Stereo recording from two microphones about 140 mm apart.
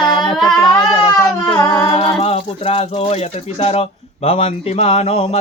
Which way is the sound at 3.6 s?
45° left (ahead or behind).